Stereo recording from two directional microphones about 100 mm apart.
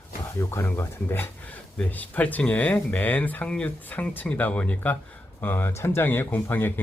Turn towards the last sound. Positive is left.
turn(degrees=20)  # may be behind; listen again after turning